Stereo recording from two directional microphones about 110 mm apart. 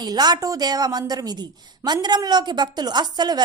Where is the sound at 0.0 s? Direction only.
40° right (ahead or behind).